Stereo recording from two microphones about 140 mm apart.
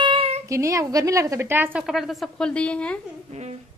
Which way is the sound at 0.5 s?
25° right (ahead or behind).